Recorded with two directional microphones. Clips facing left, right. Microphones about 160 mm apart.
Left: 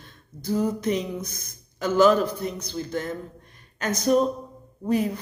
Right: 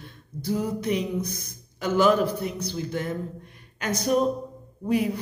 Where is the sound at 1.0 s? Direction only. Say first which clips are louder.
Right 2 dB; 15° right (ahead or behind).